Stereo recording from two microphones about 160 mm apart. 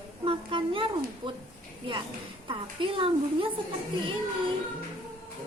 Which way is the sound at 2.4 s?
35° right (ahead or behind).